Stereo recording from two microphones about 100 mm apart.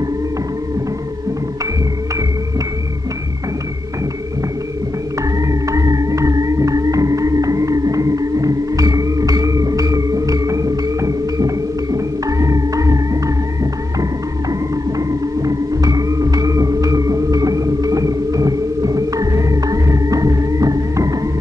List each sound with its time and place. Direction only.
5.5 s music: 35° right (ahead or behind)
15.0 s music: 35° right (ahead or behind)